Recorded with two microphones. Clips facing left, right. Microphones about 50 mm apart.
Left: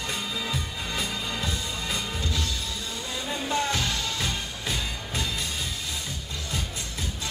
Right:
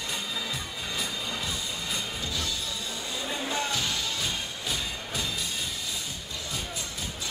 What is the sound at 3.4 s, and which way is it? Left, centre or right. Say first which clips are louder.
Music: left 5 dB; left.